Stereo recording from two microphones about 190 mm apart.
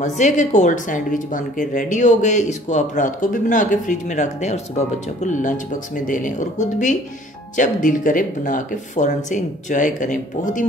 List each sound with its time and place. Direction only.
0.0 s a woman's voice: 40° left (ahead or behind)